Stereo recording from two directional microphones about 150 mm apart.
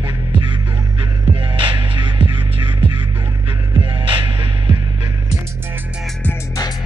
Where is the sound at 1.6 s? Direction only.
35° right (ahead or behind).